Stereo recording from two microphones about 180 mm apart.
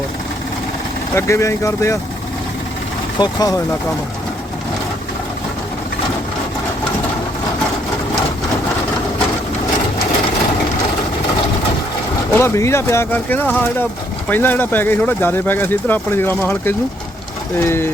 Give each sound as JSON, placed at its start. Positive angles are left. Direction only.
{"t": 1.1, "sound": "speech", "side_deg": 15}
{"t": 3.2, "sound": "speech", "side_deg": 20}
{"t": 12.3, "sound": "speech", "side_deg": 15}